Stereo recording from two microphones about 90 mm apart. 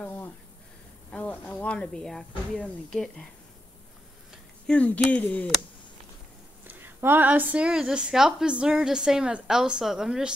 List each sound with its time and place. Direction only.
0.0 s a sound: 20° left (ahead or behind)
1.1 s speech: 15° left (ahead or behind)
4.6 s speech: 15° left (ahead or behind)
6.7 s a woman's voice: 20° right (ahead or behind)